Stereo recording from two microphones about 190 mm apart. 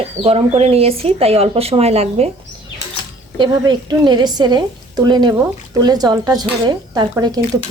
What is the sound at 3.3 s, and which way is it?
A woman's voice, 25° right (ahead or behind).